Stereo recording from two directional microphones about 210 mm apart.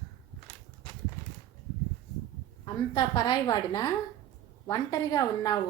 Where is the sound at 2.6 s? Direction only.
20° left (ahead or behind).